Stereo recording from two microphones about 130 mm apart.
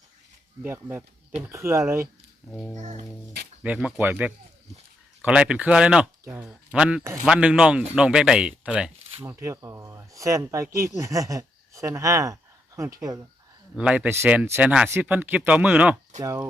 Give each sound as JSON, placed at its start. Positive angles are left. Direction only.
{"t": 0.6, "sound": "speech", "side_deg": -15}
{"t": 2.7, "sound": "speech", "side_deg": -65}
{"t": 3.6, "sound": "speech", "side_deg": -10}
{"t": 9.2, "sound": "speech", "side_deg": -20}
{"t": 13.7, "sound": "speech", "side_deg": -10}
{"t": 16.2, "sound": "speech", "side_deg": -25}